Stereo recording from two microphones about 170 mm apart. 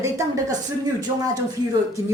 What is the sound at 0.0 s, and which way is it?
Speech, 20° right (ahead or behind).